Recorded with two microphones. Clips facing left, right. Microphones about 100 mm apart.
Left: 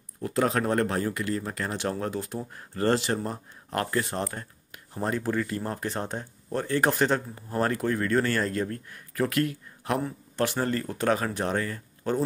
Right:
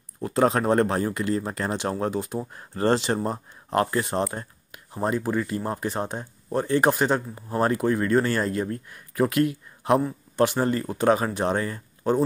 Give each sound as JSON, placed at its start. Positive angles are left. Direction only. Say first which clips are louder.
{"t": 0.2, "sound": "speech", "louder": "right 4 dB", "side_deg": -25}